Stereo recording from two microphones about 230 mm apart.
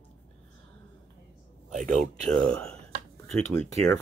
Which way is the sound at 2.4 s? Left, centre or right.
Centre.